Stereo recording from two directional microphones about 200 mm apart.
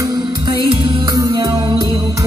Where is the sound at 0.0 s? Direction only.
20° right (ahead or behind).